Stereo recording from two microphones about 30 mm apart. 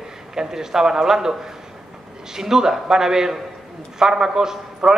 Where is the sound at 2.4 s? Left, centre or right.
Centre.